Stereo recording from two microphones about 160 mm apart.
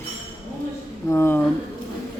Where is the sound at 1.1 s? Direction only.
15° left (ahead or behind).